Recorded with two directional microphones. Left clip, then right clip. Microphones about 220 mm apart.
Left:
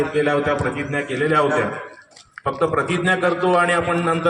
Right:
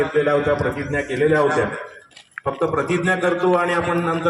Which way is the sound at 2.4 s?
30° left (ahead or behind).